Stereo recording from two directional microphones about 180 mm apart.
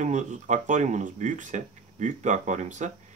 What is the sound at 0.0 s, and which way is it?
Speech, 40° right (ahead or behind).